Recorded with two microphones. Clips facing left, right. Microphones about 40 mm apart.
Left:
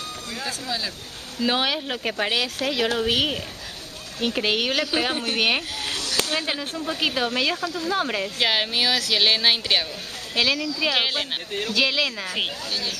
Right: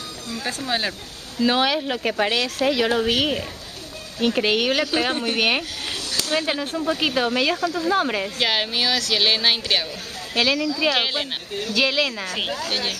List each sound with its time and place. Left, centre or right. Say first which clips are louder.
0.5 s speech: right 6 dB; right
1.4 s speech: right 4 dB; centre
2.6 s speech: right 5 dB; right
3.1 s speech: right 2 dB; centre
12.3 s speech: right 1 dB; centre
12.6 s speech: right 3 dB; right